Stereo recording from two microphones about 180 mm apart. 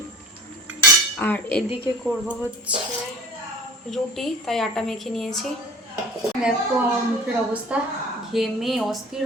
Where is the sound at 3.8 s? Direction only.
Centre (ahead or behind).